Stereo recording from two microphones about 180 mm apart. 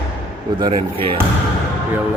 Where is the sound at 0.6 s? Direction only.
30° right (ahead or behind).